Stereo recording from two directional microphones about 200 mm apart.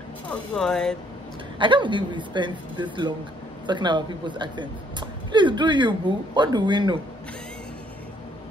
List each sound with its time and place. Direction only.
0.3 s speech: centre (ahead or behind)
1.6 s a woman's voice: 25° right (ahead or behind)